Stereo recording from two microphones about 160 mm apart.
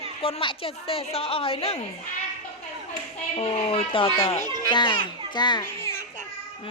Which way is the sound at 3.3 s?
35° left (ahead or behind).